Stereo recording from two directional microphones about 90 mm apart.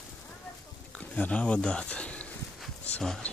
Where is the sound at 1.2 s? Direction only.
15° left (ahead or behind).